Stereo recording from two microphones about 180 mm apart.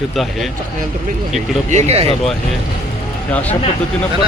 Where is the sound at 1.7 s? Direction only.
40° right (ahead or behind).